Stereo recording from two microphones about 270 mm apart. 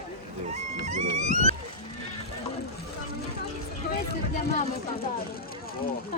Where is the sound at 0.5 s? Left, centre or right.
Right.